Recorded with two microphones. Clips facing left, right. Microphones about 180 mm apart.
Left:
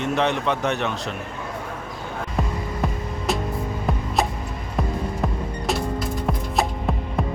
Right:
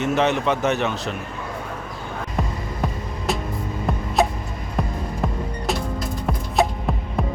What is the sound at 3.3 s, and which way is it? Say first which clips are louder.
Music: left 1 dB; centre (ahead or behind).